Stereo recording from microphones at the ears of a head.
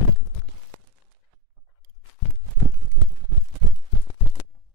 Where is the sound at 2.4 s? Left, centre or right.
Right.